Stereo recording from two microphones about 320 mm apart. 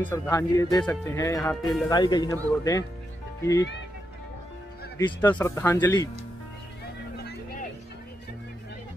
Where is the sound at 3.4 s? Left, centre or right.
Centre.